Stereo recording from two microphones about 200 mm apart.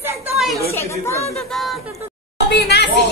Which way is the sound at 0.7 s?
15° left (ahead or behind).